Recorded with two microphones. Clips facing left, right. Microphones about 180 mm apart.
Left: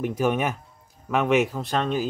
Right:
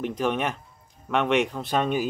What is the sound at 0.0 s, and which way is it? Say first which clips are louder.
Speech: left 2 dB; 5° left (ahead or behind).